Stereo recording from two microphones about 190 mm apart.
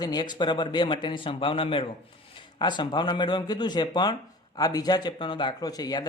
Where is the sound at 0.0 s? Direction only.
20° left (ahead or behind).